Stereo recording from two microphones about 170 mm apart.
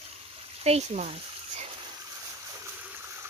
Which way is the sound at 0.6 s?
40° right (ahead or behind).